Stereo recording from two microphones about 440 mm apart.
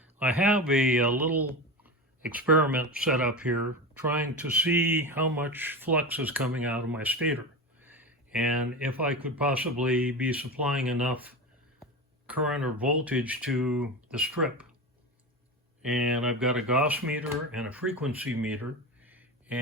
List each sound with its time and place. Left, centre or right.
0.0 s speech: centre
15.8 s speech: centre
19.0 s a sound: centre